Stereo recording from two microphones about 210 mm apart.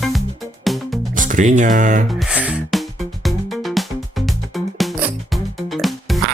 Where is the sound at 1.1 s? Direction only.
40° right (ahead or behind).